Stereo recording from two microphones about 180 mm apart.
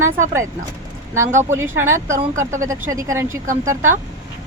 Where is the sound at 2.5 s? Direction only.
15° right (ahead or behind).